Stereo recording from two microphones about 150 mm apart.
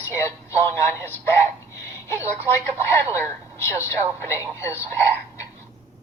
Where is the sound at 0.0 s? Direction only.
20° left (ahead or behind).